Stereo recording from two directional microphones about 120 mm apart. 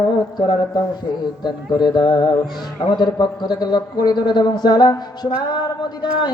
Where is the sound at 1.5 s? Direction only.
35° left (ahead or behind).